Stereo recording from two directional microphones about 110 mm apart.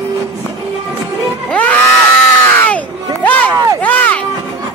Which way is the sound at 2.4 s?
15° left (ahead or behind).